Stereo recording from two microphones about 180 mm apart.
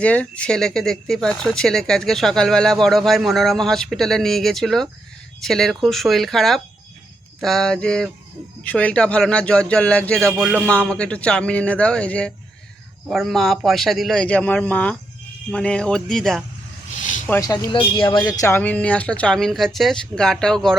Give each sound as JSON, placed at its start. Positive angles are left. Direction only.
{"t": 0.0, "sound": "a man's voice", "side_deg": 5}
{"t": 17.0, "sound": "a sound", "side_deg": 45}
{"t": 17.2, "sound": "speech", "side_deg": 10}
{"t": 17.5, "sound": "speech", "side_deg": 25}